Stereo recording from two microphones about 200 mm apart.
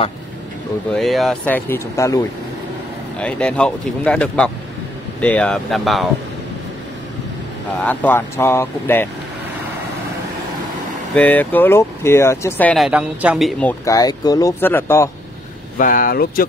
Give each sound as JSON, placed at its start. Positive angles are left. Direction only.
{"t": 0.9, "sound": "speech", "side_deg": 0}
{"t": 7.8, "sound": "speech", "side_deg": 10}
{"t": 11.1, "sound": "speech", "side_deg": 10}
{"t": 15.8, "sound": "speech", "side_deg": 45}